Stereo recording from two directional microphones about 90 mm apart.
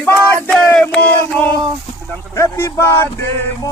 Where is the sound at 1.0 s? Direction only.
20° left (ahead or behind).